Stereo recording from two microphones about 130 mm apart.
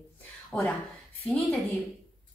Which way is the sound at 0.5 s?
5° left (ahead or behind).